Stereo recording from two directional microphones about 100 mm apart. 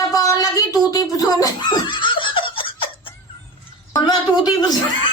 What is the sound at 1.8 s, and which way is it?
Laughter, 55° left (ahead or behind).